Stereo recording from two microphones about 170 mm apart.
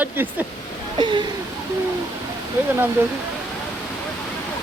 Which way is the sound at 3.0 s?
10° right (ahead or behind).